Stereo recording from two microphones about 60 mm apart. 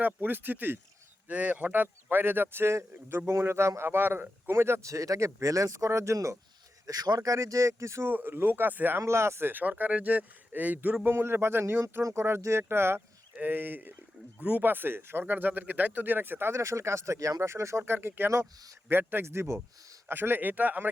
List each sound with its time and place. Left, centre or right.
0.0 s a man's voice: right
4.8 s speech: right
6.8 s speech: right
8.0 s speech: right
9.0 s speech: right
11.1 s a man's voice: right
13.3 s speech: right
14.3 s speech: centre
14.6 s a man's voice: right
20.1 s speech: right